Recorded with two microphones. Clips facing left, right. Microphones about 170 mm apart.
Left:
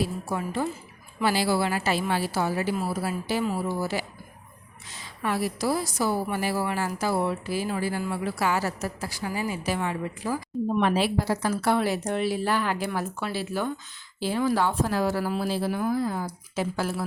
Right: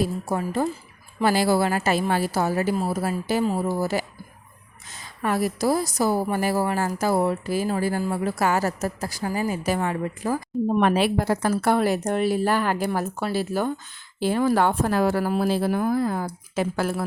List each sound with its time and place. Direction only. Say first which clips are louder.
0.0 s a woman's voice: right 4 dB; 45° right (ahead or behind)